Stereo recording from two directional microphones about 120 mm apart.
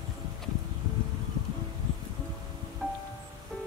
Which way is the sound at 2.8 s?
5° left (ahead or behind).